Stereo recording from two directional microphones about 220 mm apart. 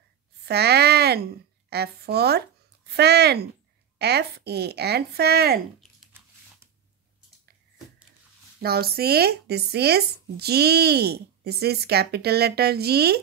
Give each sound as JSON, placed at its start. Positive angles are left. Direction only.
{"t": 0.5, "sound": "a sound", "side_deg": -50}
{"t": 1.7, "sound": "speech", "side_deg": -45}
{"t": 6.1, "sound": "biting", "side_deg": -10}
{"t": 8.6, "sound": "speech", "side_deg": -45}